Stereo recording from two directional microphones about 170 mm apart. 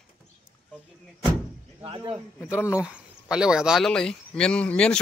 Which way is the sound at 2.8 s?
5° right (ahead or behind).